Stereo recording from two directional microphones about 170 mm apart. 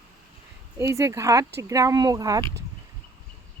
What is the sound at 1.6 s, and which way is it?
Speech, 20° right (ahead or behind).